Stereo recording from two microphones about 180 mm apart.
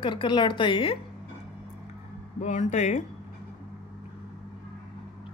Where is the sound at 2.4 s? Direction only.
40° left (ahead or behind).